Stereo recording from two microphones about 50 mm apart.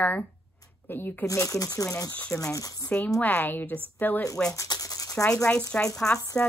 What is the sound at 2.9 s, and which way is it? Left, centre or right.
A woman's voice, left.